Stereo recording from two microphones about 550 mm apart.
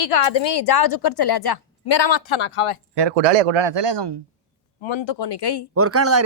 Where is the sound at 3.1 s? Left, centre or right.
Right.